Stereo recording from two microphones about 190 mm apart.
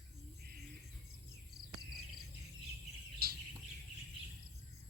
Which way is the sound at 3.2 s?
55° right (ahead or behind).